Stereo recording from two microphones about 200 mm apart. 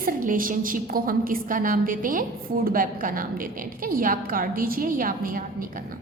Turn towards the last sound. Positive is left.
turn(degrees=-45)  # may be behind; listen again after turning